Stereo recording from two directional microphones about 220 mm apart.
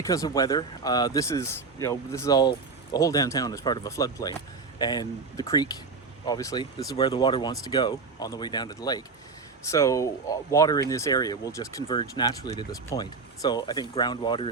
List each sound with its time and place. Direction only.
0.0 s speech: 15° left (ahead or behind)